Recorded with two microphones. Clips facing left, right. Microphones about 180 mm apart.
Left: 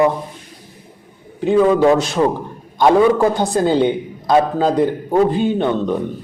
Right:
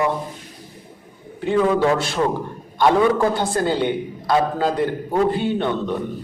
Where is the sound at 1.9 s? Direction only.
20° left (ahead or behind).